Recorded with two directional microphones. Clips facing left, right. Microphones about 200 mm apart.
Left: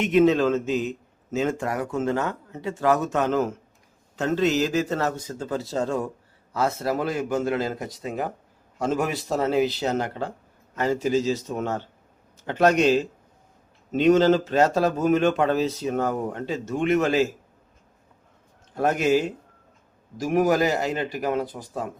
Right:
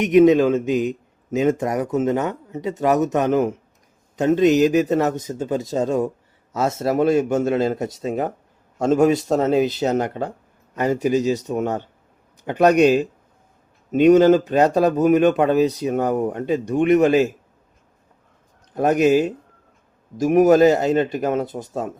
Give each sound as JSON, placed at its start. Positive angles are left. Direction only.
{"t": 0.0, "sound": "a man's voice", "side_deg": -15}
{"t": 18.7, "sound": "a man's voice", "side_deg": -20}